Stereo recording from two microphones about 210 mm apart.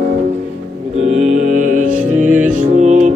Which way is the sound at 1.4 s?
40° right (ahead or behind).